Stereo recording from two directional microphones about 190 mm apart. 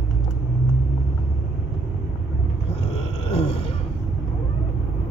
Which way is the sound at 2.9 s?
30° left (ahead or behind).